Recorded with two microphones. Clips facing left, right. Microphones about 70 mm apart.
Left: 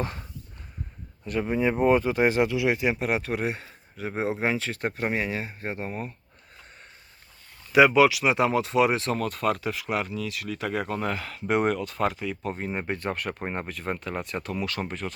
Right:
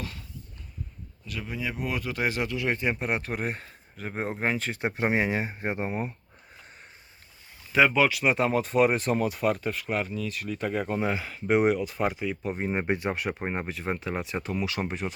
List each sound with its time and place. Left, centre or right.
0.0 s a sound: left
1.2 s speech: left; by 4.8 s centre
4.8 s speech: centre
7.7 s speech: centre; by 13.0 s right
13.0 s speech: centre